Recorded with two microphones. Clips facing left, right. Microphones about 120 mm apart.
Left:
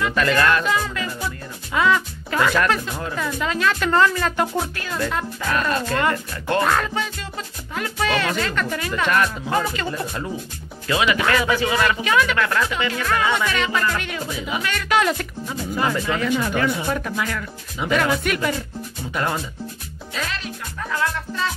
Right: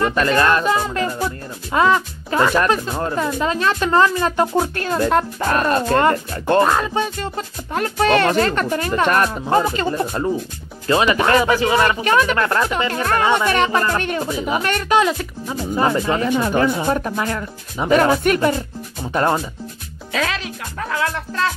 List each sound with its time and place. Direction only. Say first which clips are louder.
0.0 s speech: right 3 dB; 35° right (ahead or behind)
4.7 s speech: right 8 dB; 40° right (ahead or behind)
6.9 s speech: right 6 dB; 40° right (ahead or behind)
15.4 s speech: right 5 dB; 25° right (ahead or behind)
20.1 s speech: right 6 dB; 80° right; by 21.5 s 65° right (ahead or behind)